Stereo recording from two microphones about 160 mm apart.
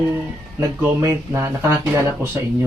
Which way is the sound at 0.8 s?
15° right (ahead or behind).